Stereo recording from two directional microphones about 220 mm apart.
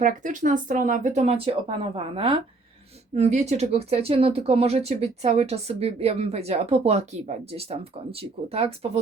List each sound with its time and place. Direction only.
0.0 s speech: 35° right (ahead or behind)